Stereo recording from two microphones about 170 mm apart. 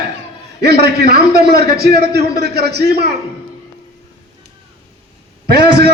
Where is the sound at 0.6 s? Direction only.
70° right (ahead or behind).